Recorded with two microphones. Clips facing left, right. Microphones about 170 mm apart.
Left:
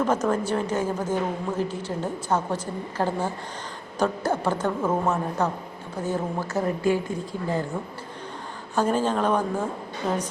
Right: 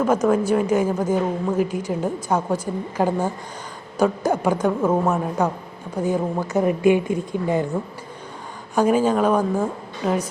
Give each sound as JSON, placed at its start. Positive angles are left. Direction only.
{"t": 0.0, "sound": "a woman's voice", "side_deg": -10}
{"t": 8.7, "sound": "a woman's voice", "side_deg": -10}